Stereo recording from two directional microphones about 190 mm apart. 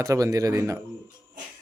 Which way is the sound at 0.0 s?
15° right (ahead or behind).